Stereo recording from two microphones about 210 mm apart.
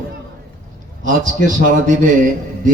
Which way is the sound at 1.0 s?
40° right (ahead or behind).